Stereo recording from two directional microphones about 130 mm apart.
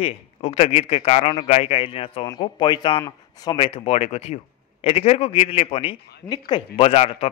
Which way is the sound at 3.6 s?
45° left (ahead or behind).